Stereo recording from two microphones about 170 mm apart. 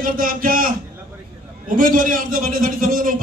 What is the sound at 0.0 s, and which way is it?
Speech, 55° right (ahead or behind).